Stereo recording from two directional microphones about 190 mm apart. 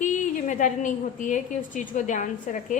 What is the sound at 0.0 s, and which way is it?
A woman's voice, 40° left (ahead or behind).